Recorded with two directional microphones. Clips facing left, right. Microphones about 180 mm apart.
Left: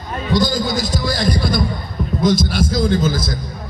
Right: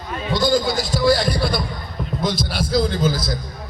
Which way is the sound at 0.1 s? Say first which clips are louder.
Even; 40° left (ahead or behind).